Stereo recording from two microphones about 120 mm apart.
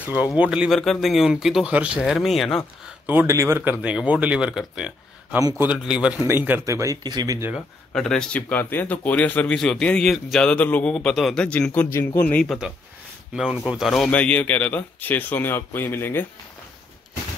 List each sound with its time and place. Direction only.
0.0 s speech: 15° right (ahead or behind)
3.1 s speech: 20° right (ahead or behind)
7.5 s speech: 5° left (ahead or behind)
12.4 s speech: 5° right (ahead or behind); by 16.3 s 20° left (ahead or behind)